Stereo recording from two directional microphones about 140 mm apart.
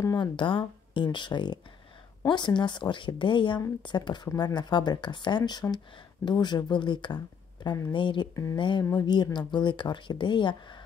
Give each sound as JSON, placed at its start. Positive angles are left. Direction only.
{"t": 0.0, "sound": "speech", "side_deg": 30}
{"t": 7.6, "sound": "speech", "side_deg": 20}
{"t": 7.9, "sound": "speech", "side_deg": 35}